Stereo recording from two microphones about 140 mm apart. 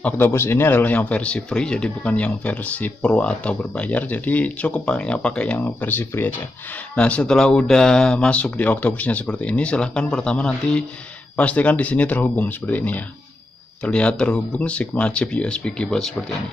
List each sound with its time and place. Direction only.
0.0 s speech: 15° left (ahead or behind)